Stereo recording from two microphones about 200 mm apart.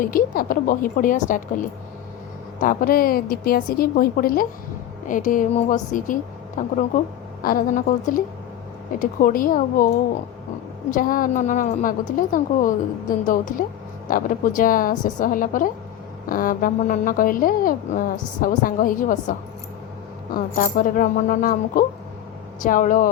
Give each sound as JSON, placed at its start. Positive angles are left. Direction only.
{"t": 0.0, "sound": "a woman's voice", "side_deg": 45}
{"t": 2.6, "sound": "a woman's voice", "side_deg": 45}
{"t": 10.9, "sound": "a woman's voice", "side_deg": 45}
{"t": 20.3, "sound": "a woman's voice", "side_deg": 45}